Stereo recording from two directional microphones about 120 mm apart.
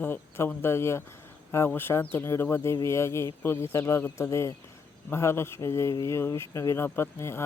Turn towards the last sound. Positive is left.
turn(degrees=20)  # may be behind; listen again after turning